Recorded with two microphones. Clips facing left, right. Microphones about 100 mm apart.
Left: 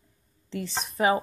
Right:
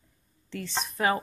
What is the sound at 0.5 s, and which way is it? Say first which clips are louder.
Speech: left 3 dB; 5° left (ahead or behind).